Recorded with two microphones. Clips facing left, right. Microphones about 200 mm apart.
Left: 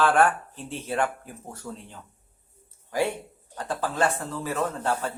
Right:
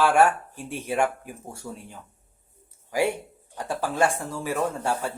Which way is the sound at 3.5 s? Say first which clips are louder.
Right 1 dB; 10° right (ahead or behind).